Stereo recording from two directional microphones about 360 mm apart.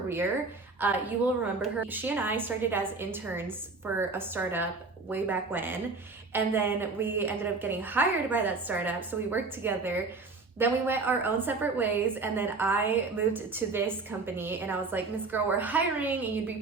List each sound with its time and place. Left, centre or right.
0.8 s a woman's voice: centre